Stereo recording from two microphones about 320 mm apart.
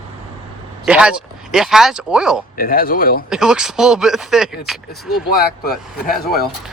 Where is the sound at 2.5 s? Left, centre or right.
Left.